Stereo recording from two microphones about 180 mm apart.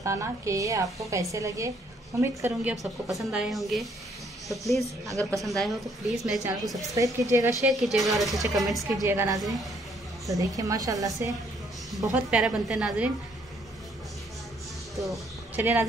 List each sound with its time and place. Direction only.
0.0 s a woman's voice: 15° right (ahead or behind)
2.7 s a woman's voice: centre (ahead or behind)
6.9 s a woman's voice: 15° right (ahead or behind)
7.7 s a woman's voice: centre (ahead or behind)
9.0 s a woman's voice: 15° right (ahead or behind)
9.4 s a woman's voice: centre (ahead or behind)
10.2 s a woman's voice: 20° right (ahead or behind)
12.1 s a woman's voice: 5° right (ahead or behind)
15.0 s a man's voice: 10° right (ahead or behind)